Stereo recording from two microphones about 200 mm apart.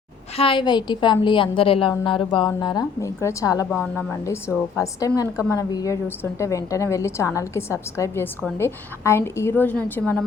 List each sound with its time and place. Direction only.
0.3 s a woman's voice: 25° left (ahead or behind); by 10.2 s 5° left (ahead or behind)